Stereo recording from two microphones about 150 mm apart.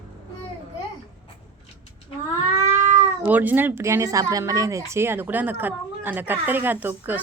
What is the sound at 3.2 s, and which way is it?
Speech, 10° right (ahead or behind).